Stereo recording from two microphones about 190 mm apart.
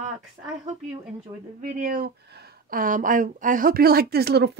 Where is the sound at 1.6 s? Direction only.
45° right (ahead or behind).